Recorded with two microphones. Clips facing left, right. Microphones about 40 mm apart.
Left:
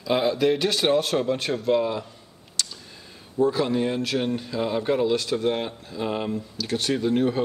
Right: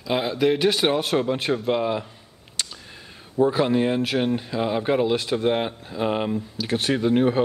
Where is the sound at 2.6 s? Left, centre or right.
Right.